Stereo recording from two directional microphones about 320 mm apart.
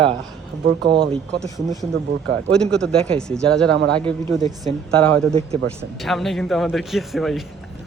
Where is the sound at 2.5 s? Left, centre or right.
Centre.